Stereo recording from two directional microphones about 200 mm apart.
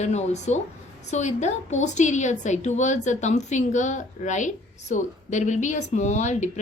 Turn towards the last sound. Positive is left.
turn(degrees=35)  # may be behind; listen again after turning